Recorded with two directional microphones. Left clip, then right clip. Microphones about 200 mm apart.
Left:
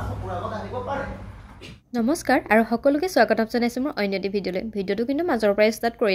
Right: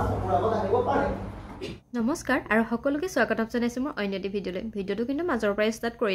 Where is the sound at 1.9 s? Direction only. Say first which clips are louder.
Left 6 dB; 20° left (ahead or behind).